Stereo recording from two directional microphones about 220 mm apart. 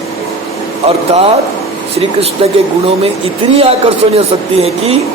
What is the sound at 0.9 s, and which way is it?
Speech, 25° right (ahead or behind).